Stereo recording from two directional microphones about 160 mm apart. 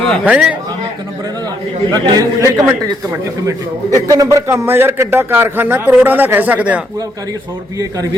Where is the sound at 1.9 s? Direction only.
25° right (ahead or behind); by 6.8 s 10° right (ahead or behind).